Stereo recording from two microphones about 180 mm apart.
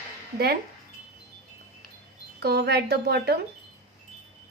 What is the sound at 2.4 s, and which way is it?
Speech, 60° right (ahead or behind).